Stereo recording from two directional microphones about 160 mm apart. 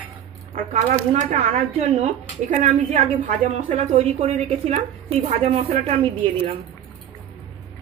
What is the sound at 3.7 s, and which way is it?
Speech, 45° right (ahead or behind).